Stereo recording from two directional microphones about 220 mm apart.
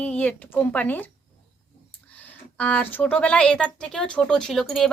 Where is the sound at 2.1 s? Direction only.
5° left (ahead or behind).